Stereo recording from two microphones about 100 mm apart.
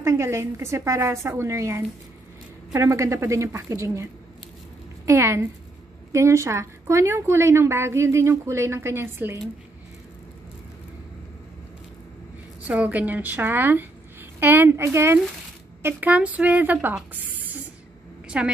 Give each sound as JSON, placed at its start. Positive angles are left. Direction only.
{"t": 0.0, "sound": "a woman's voice", "side_deg": -30}
{"t": 12.6, "sound": "a woman's voice", "side_deg": -15}
{"t": 15.8, "sound": "a woman's voice", "side_deg": -15}
{"t": 17.1, "sound": "spray", "side_deg": -15}
{"t": 18.3, "sound": "a woman's voice", "side_deg": -10}